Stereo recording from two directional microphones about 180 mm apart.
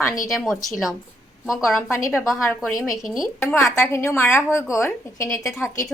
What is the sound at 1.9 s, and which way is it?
Speech, 15° left (ahead or behind).